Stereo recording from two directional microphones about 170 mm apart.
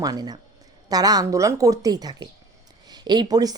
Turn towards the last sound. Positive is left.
turn(degrees=-20)  # may be behind; listen again after turning